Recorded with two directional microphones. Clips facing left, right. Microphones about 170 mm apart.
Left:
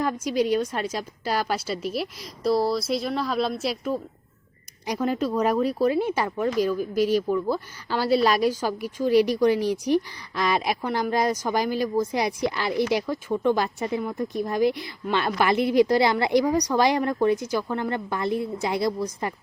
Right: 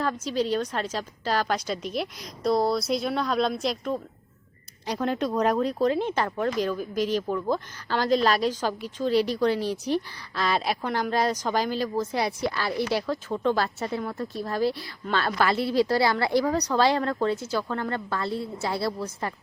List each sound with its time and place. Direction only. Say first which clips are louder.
0.0 s a woman's voice: left 3 dB; 10° left (ahead or behind)